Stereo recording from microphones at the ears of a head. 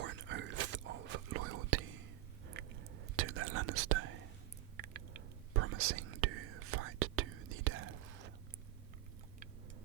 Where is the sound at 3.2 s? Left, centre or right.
Right.